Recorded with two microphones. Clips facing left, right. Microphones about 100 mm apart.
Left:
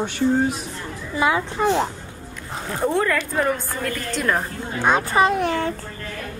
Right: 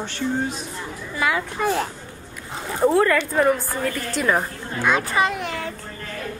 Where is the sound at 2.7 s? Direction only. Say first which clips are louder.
Right 3 dB; 5° right (ahead or behind).